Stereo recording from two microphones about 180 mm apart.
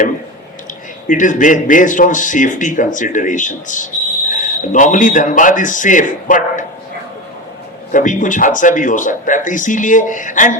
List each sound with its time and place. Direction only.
1.0 s a man's voice: 45° left (ahead or behind)
7.9 s a man's voice: 45° left (ahead or behind)